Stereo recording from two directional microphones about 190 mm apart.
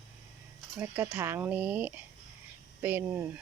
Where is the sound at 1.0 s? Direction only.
15° right (ahead or behind).